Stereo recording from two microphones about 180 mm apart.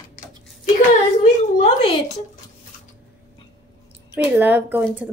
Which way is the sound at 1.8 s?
30° left (ahead or behind).